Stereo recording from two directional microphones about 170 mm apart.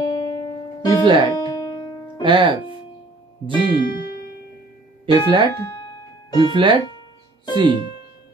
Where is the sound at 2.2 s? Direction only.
30° right (ahead or behind).